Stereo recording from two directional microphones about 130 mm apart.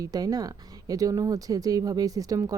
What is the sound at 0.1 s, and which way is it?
Speech, 30° right (ahead or behind).